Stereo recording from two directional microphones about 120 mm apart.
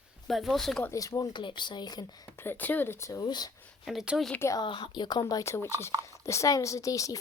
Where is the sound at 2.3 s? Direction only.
15° left (ahead or behind); by 3.5 s 35° left (ahead or behind).